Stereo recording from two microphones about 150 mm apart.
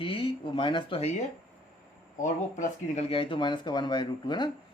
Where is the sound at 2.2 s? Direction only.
55° left (ahead or behind).